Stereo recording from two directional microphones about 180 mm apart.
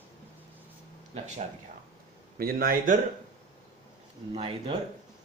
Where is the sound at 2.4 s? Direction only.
55° right (ahead or behind).